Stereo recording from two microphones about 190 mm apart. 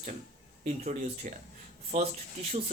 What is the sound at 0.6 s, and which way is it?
Speech, 40° right (ahead or behind).